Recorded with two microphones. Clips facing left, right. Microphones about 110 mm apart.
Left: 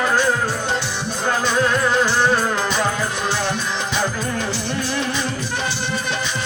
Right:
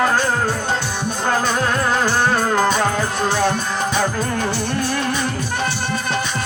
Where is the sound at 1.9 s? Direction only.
50° right (ahead or behind).